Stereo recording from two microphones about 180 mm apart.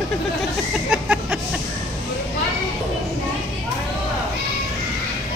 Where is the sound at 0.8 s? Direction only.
5° right (ahead or behind).